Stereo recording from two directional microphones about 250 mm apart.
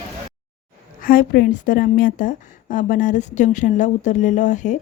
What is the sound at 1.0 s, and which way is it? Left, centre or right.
A woman's voice, left.